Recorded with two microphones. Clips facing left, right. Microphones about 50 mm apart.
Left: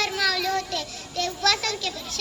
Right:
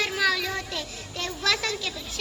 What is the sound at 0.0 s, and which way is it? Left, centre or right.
A child's voice, centre.